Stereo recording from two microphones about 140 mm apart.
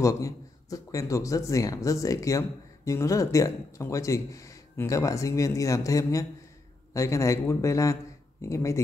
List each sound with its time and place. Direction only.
0.0 s a man's voice: 25° left (ahead or behind)